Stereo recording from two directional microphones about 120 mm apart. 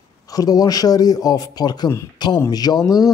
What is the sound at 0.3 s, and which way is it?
Speech, 30° left (ahead or behind).